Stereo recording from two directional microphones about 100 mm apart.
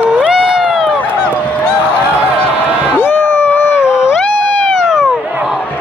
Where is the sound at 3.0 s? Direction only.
20° left (ahead or behind).